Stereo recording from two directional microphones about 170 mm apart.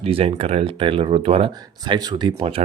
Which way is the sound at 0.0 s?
35° right (ahead or behind).